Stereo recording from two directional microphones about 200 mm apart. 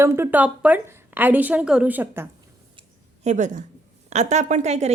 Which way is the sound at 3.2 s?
35° right (ahead or behind).